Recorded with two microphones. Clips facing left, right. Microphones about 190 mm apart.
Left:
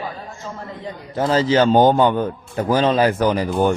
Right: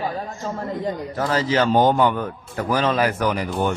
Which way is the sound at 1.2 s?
30° left (ahead or behind).